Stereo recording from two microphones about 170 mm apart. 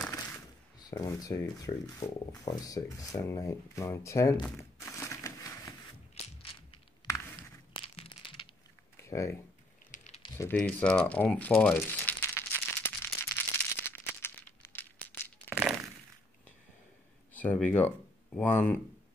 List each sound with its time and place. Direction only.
0.1 s speech: 20° left (ahead or behind)
4.6 s crushing: 15° left (ahead or behind)
6.1 s crushing: 35° left (ahead or behind)
7.7 s a sound: 35° left (ahead or behind)
8.9 s computer keyboard: 15° left (ahead or behind)
9.8 s a sound: 45° left (ahead or behind)
10.3 s crumpling: 10° left (ahead or behind)
15.5 s thunk: 5° right (ahead or behind)
17.3 s speech: 10° left (ahead or behind)